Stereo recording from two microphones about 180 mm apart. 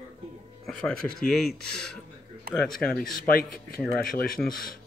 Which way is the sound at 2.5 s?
60° right (ahead or behind).